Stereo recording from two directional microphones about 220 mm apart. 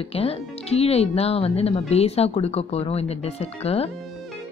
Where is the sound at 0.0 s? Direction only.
25° left (ahead or behind).